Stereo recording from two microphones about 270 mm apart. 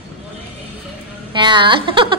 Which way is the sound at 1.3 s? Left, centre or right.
Centre.